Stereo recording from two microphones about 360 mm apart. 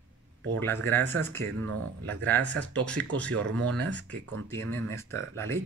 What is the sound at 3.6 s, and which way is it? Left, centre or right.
Speech, right.